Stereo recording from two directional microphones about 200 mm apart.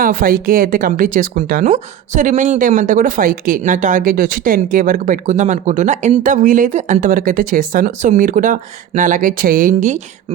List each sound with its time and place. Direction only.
0.0 s speech: 45° right (ahead or behind)